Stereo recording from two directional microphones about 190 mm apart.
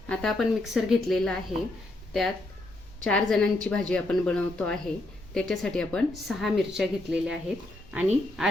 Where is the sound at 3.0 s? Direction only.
5° left (ahead or behind).